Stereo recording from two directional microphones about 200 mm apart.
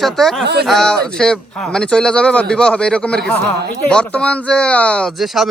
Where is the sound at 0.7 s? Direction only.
5° left (ahead or behind).